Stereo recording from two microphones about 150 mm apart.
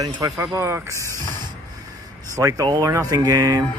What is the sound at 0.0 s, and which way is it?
Speech, 25° right (ahead or behind).